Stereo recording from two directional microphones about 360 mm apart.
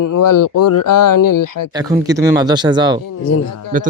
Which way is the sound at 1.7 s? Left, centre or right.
Centre.